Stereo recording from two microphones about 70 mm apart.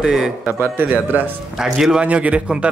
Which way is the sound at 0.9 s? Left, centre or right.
Right.